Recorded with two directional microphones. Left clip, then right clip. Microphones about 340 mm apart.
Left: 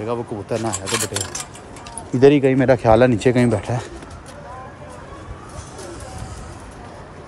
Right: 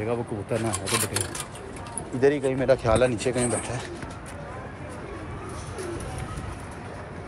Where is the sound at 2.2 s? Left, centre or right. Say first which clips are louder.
Left 9 dB; left.